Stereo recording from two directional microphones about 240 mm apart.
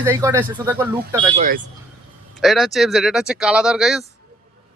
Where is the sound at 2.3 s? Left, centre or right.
Centre.